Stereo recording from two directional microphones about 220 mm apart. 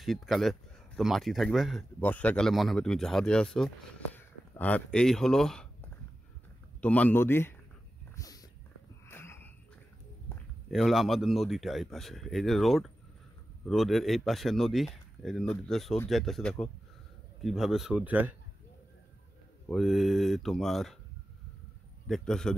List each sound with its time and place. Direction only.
0.0 s speech: centre (ahead or behind)
8.2 s a sound: 15° left (ahead or behind)
10.7 s speech: centre (ahead or behind)
19.7 s speech: centre (ahead or behind)
22.0 s speech: centre (ahead or behind)